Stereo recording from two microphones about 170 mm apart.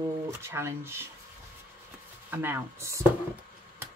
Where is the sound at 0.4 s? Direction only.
15° right (ahead or behind).